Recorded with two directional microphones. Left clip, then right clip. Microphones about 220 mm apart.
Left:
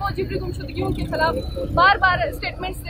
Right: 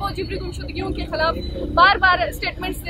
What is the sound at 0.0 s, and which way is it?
Speech, 15° right (ahead or behind).